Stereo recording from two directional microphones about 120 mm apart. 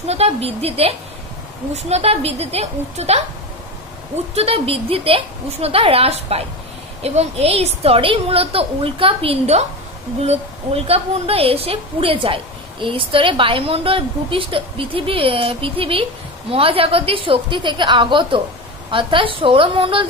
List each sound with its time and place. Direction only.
0.0 s a woman's voice: 60° right (ahead or behind)
4.4 s a woman's voice: 55° right (ahead or behind)